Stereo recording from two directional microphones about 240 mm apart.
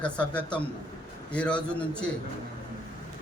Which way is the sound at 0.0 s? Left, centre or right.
Centre.